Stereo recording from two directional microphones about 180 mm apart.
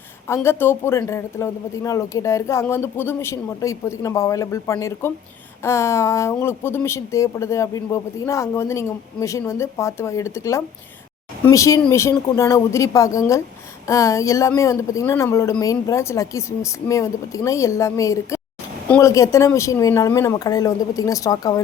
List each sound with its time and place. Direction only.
0.3 s a woman's voice: 15° left (ahead or behind)